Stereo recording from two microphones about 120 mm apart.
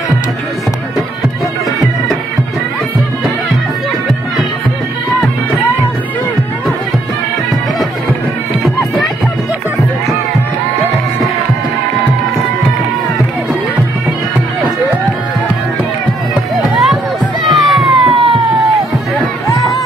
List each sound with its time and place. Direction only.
16.7 s run: centre (ahead or behind)
17.5 s music: centre (ahead or behind)
18.0 s emergency vehicle: 45° right (ahead or behind)